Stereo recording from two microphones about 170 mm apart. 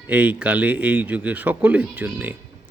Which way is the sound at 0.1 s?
10° right (ahead or behind).